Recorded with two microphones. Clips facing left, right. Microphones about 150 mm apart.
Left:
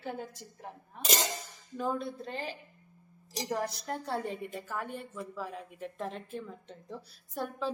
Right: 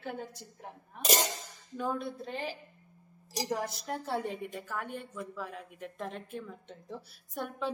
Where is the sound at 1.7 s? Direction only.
Centre (ahead or behind).